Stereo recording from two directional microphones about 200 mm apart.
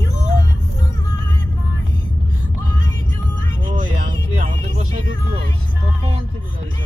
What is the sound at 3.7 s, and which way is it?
Music, 40° right (ahead or behind).